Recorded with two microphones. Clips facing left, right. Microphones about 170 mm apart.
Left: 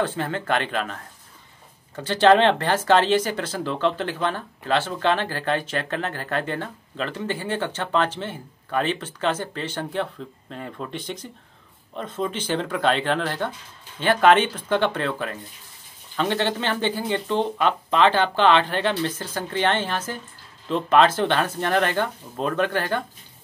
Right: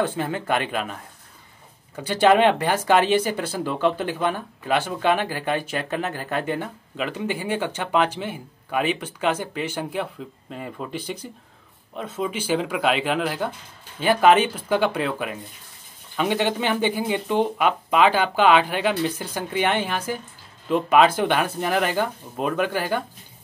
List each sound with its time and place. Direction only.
0.0 s speech: 15° right (ahead or behind)
2.0 s speech: 10° right (ahead or behind)